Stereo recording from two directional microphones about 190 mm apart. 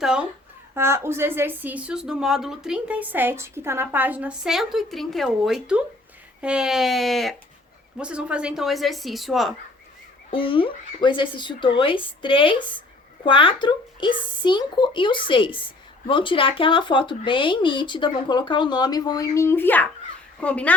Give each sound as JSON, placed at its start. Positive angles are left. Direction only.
{"t": 0.0, "sound": "a woman's voice", "side_deg": -5}
{"t": 10.3, "sound": "a child's voice", "side_deg": 30}